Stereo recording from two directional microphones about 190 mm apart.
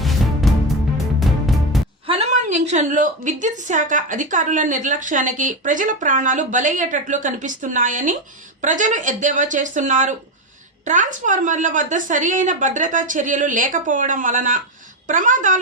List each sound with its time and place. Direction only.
0.0 s music: centre (ahead or behind)
2.0 s a sound: 35° right (ahead or behind)
3.4 s a woman's voice: 40° right (ahead or behind)